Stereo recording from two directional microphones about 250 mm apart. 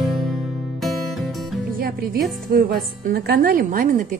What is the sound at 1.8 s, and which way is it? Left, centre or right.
A woman's voice, right.